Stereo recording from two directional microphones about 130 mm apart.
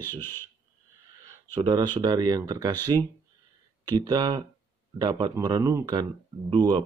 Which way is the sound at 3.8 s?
30° right (ahead or behind).